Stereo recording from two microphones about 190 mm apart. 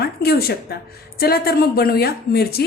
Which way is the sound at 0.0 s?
55° left (ahead or behind).